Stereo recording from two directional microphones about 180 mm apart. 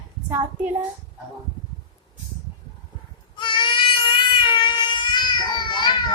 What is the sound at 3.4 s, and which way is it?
Baby cry, 25° left (ahead or behind).